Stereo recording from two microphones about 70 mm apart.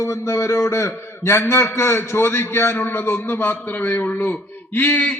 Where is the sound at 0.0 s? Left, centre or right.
Left.